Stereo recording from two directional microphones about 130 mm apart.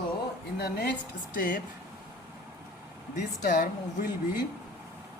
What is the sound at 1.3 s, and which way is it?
Speech, 90° left.